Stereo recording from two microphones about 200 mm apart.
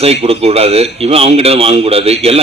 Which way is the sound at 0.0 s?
30° right (ahead or behind).